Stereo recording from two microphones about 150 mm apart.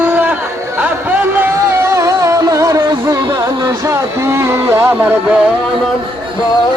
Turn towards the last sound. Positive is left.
turn(degrees=-15)  # may be behind; listen again after turning